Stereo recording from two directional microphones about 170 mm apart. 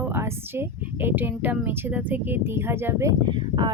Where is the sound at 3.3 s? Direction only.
25° right (ahead or behind).